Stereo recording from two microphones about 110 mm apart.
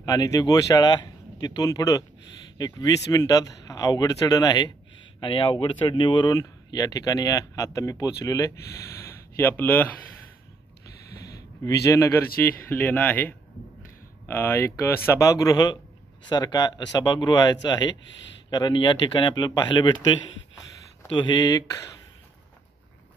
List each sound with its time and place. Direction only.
0.0 s speech: 35° left (ahead or behind)
6.3 s speech: 30° left (ahead or behind)
11.2 s a sound: 30° left (ahead or behind)
12.6 s speech: 20° left (ahead or behind); by 20.0 s 45° left (ahead or behind)
21.1 s speech: 45° left (ahead or behind)